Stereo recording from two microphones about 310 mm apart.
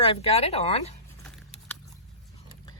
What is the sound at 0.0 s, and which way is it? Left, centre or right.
Speech, centre.